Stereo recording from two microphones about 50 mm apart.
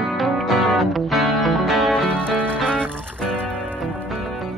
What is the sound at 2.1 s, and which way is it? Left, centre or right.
Music, left.